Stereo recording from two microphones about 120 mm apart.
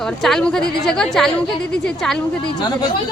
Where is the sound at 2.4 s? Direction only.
35° left (ahead or behind).